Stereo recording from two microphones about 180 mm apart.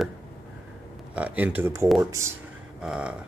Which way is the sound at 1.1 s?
10° right (ahead or behind).